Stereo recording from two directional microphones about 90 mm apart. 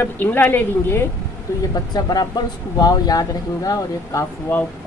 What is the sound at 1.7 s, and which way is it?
Speech, 45° left (ahead or behind).